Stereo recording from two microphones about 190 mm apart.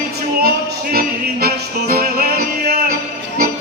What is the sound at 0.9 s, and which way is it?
Music, 55° right (ahead or behind).